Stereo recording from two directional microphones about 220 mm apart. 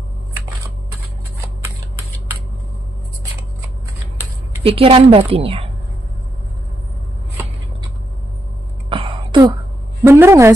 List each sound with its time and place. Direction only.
4.6 s a woman's voice: 25° right (ahead or behind)
8.8 s a sound: 25° right (ahead or behind)
10.0 s a woman's voice: 10° right (ahead or behind)